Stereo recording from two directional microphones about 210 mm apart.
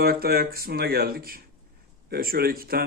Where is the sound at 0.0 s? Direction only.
45° right (ahead or behind).